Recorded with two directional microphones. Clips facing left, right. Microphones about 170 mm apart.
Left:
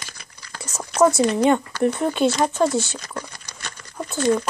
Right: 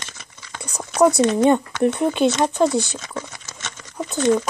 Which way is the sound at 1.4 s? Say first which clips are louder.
Right 2 dB; 20° right (ahead or behind).